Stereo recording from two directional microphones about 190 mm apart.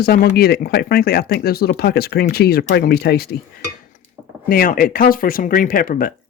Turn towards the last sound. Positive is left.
turn(degrees=45)  # may be behind; listen again after turning